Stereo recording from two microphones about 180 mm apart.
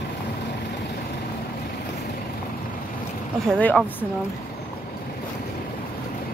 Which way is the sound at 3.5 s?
5° left (ahead or behind).